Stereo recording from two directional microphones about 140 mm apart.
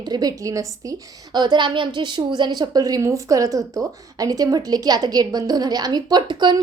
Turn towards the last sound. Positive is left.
turn(degrees=-35)  # may be behind; listen again after turning